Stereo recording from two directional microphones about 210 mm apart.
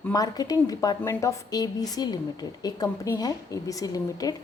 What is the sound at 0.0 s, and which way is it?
A woman's voice, 15° left (ahead or behind).